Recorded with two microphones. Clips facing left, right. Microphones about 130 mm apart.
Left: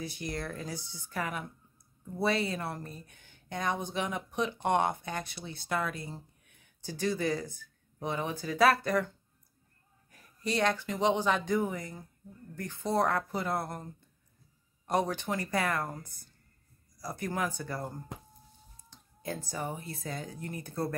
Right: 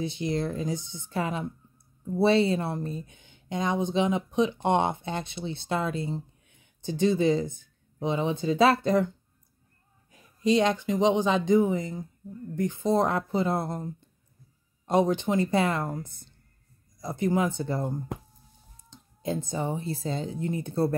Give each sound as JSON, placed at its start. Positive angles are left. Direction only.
{"t": 0.0, "sound": "speech", "side_deg": -25}
{"t": 10.1, "sound": "speech", "side_deg": -20}
{"t": 14.9, "sound": "speech", "side_deg": -20}